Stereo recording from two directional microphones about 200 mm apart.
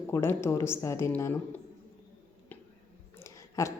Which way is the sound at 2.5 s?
10° left (ahead or behind).